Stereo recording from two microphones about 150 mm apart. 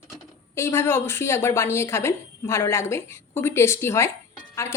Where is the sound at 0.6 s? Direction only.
15° left (ahead or behind).